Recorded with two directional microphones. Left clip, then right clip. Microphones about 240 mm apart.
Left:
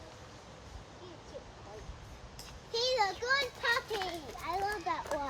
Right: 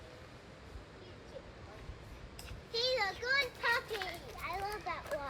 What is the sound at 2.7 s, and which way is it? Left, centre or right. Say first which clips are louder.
Children playing: left 3 dB; left.